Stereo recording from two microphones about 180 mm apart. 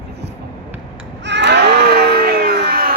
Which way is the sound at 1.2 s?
75° right (ahead or behind).